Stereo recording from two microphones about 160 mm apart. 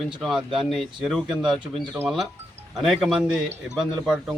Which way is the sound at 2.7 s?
Centre (ahead or behind).